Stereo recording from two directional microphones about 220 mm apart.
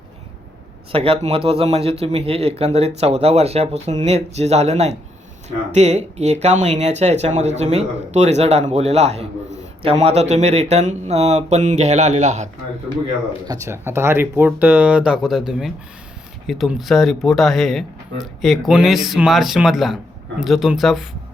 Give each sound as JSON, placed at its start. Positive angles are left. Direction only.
{"t": 0.9, "sound": "speech", "side_deg": -25}
{"t": 13.5, "sound": "speech", "side_deg": -10}